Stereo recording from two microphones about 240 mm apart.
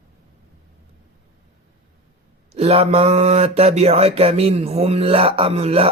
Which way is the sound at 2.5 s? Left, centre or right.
Right.